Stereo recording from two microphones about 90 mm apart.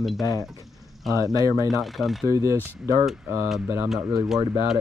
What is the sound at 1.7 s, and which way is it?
Speech, centre (ahead or behind).